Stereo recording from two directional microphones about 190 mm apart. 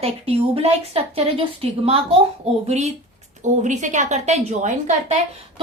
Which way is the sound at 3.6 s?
40° right (ahead or behind).